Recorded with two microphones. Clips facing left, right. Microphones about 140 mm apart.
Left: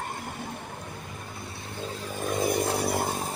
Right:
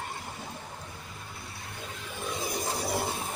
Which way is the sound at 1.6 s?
30° left (ahead or behind).